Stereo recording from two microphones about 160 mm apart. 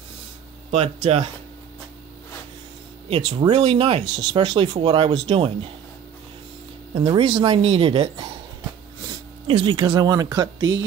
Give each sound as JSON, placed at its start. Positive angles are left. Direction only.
{"t": 0.7, "sound": "speech", "side_deg": -40}
{"t": 3.1, "sound": "speech", "side_deg": -35}
{"t": 6.9, "sound": "speech", "side_deg": -30}